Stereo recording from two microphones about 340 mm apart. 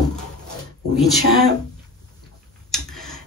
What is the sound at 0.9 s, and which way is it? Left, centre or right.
Speech, centre.